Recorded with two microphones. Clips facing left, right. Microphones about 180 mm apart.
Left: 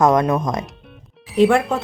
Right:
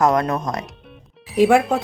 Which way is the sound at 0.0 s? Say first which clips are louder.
Left 2 dB; 20° left (ahead or behind).